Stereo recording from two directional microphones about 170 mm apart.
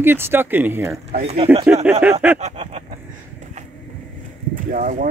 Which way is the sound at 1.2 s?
35° right (ahead or behind).